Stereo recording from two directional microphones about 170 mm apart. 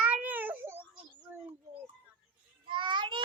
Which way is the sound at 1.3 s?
10° right (ahead or behind).